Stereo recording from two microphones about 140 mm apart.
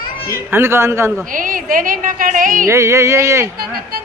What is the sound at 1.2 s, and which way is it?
A woman's voice, 75° right (ahead or behind).